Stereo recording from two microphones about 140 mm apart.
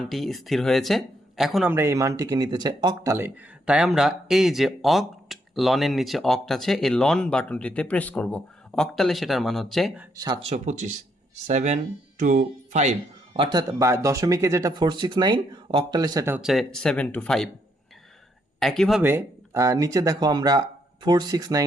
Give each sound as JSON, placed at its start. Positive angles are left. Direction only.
{"t": 0.0, "sound": "speech", "side_deg": 0}
{"t": 1.7, "sound": "speech", "side_deg": -20}
{"t": 10.2, "sound": "speech", "side_deg": -30}
{"t": 10.5, "sound": "speech", "side_deg": -60}
{"t": 13.3, "sound": "speech", "side_deg": -35}
{"t": 14.7, "sound": "speech", "side_deg": -35}
{"t": 16.4, "sound": "speech", "side_deg": 0}
{"t": 18.6, "sound": "speech", "side_deg": 5}
{"t": 19.0, "sound": "speech", "side_deg": -20}